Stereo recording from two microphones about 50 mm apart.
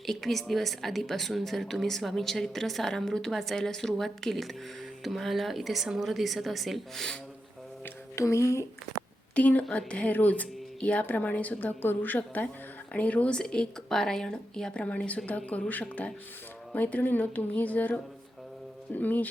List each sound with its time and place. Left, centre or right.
0.0 s a woman's voice: centre
8.1 s speech: left
9.3 s a woman's voice: left
13.3 s a woman's voice: centre; by 19.3 s left